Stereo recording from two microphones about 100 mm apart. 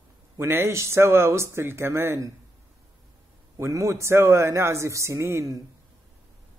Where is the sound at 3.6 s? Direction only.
30° right (ahead or behind).